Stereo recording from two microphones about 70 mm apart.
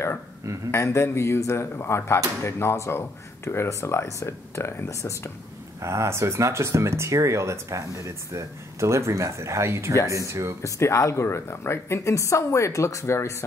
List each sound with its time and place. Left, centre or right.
0.7 s speech: left
5.8 s speech: right
10.6 s a woman's voice: left